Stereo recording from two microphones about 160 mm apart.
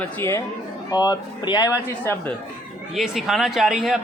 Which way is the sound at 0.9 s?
25° left (ahead or behind).